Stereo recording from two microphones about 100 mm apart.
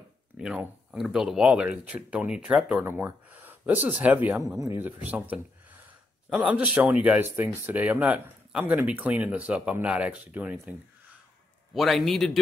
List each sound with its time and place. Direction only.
0.4 s speech: 5° right (ahead or behind)
4.6 s speech: 30° right (ahead or behind)
4.8 s speech: 15° right (ahead or behind)
11.7 s a man's voice: centre (ahead or behind)